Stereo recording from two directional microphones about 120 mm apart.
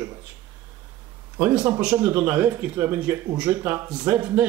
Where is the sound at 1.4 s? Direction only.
15° right (ahead or behind).